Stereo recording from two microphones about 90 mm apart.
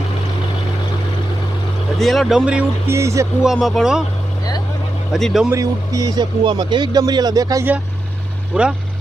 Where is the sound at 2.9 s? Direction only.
30° right (ahead or behind).